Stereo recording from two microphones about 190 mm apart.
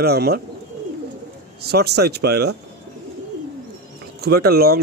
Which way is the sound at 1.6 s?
55° right (ahead or behind).